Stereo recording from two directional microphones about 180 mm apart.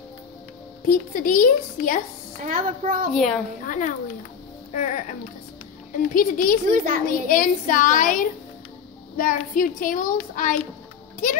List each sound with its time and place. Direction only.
0.8 s child singing: 50° left (ahead or behind)
2.4 s a child's voice: 50° right (ahead or behind)
3.1 s a child's voice: centre (ahead or behind)
3.6 s child singing: 45° left (ahead or behind)
6.1 s child singing: 50° left (ahead or behind)
6.7 s a child's voice: 50° right (ahead or behind)
7.2 s child singing: 50° left (ahead or behind)